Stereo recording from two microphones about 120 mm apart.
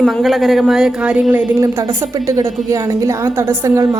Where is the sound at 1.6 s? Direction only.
25° right (ahead or behind).